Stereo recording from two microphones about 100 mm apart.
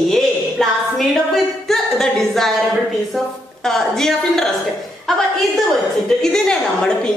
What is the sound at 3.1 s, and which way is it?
A woman's voice, 5° left (ahead or behind).